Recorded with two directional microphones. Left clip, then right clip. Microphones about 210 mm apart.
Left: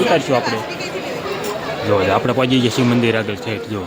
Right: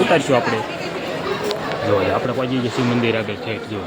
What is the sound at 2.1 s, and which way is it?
Speech, 50° left (ahead or behind).